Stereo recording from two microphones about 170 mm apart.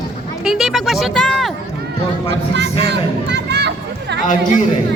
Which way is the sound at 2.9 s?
90° right.